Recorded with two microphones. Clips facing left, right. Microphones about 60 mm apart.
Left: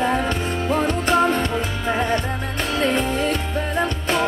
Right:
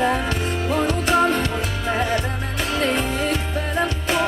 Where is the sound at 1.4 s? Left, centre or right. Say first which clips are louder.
Left 1 dB; centre.